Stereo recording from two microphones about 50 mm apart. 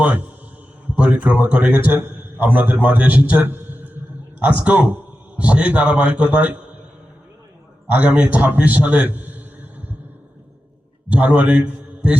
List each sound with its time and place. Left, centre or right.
0.0 s a man's voice: right
3.4 s a sound: right
4.4 s a man's voice: right
7.9 s a man's voice: right
11.1 s a man's voice: right